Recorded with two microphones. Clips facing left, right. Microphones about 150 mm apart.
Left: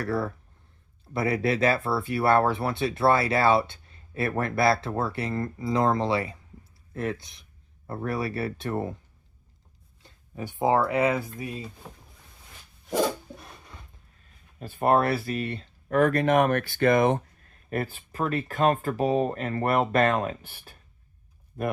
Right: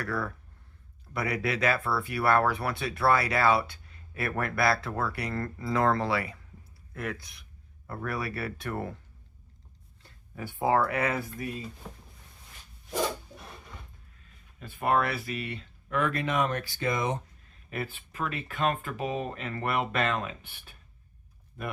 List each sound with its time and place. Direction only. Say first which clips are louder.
0.0 s speech: left 5 dB; 30° left (ahead or behind)
10.0 s speech: left 3 dB; 20° left (ahead or behind)
14.6 s speech: left 5 dB; 35° left (ahead or behind); by 17.2 s 55° left (ahead or behind)
17.7 s speech: left 6 dB; 40° left (ahead or behind)